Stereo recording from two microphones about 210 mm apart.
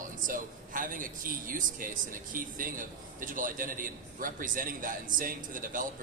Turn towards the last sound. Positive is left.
turn(degrees=-40)  # may be behind; listen again after turning